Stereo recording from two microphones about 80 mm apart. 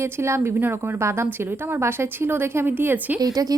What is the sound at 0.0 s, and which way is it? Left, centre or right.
A woman's voice, right.